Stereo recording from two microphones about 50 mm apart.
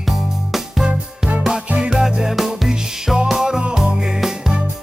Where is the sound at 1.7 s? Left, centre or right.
Centre.